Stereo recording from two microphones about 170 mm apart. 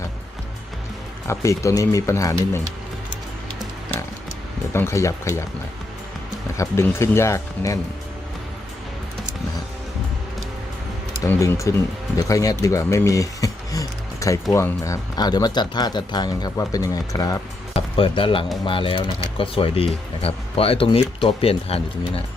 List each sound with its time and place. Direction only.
1.3 s speech: 15° left (ahead or behind)
4.7 s speech: 15° left (ahead or behind)
6.6 s speech: 15° left (ahead or behind)
11.2 s speech: 15° left (ahead or behind)
17.7 s speech: 30° left (ahead or behind)